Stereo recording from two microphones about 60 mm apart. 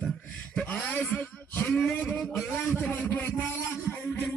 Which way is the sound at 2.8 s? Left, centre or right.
Left.